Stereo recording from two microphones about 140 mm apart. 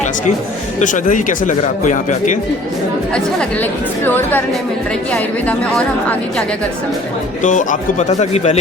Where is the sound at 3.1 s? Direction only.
5° left (ahead or behind).